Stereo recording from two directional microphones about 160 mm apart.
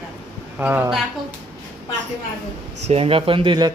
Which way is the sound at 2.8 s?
35° right (ahead or behind).